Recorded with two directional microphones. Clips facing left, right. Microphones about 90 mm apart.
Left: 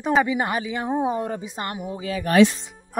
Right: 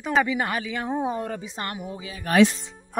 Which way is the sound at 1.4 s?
20° left (ahead or behind).